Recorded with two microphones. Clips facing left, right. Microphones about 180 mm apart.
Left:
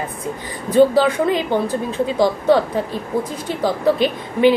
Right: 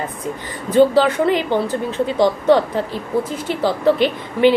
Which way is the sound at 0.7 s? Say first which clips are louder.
Even; 10° left (ahead or behind).